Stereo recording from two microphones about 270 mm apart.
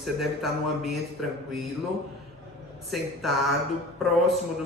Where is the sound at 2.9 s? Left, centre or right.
Centre.